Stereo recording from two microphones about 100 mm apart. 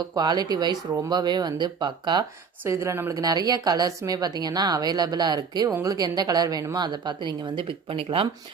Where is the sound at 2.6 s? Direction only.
30° right (ahead or behind).